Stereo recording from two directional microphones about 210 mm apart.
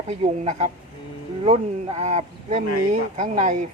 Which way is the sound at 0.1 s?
30° right (ahead or behind).